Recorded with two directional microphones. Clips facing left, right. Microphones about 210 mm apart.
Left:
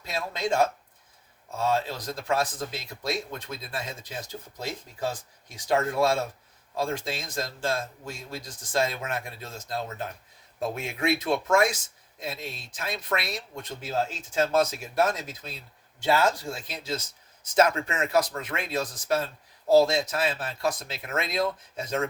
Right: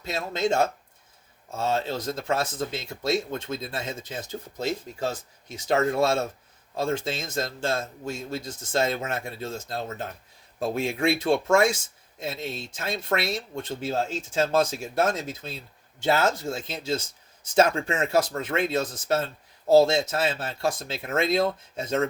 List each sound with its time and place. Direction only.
0.0 s speech: 25° right (ahead or behind)